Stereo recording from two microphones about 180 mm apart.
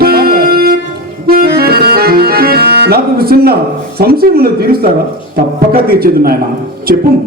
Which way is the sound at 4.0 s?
60° right (ahead or behind).